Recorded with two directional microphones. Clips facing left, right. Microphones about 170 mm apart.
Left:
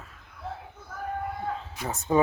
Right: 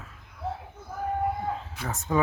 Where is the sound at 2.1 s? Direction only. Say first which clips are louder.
Left 3 dB; 25° left (ahead or behind).